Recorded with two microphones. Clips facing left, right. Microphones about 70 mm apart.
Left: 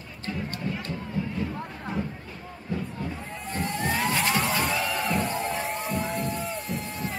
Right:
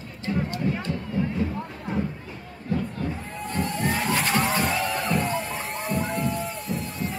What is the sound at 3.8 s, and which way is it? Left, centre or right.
Slosh, centre.